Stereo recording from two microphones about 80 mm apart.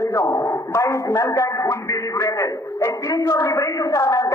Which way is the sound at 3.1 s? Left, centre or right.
Left.